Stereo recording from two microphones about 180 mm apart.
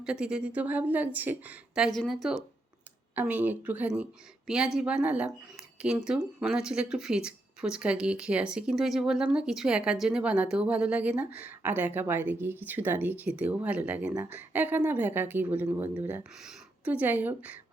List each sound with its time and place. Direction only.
0.0 s a woman's voice: 5° right (ahead or behind)
3.2 s a woman's voice: 10° right (ahead or behind)